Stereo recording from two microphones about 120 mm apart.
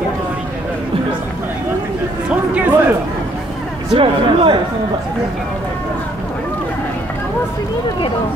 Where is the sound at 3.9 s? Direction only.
45° right (ahead or behind).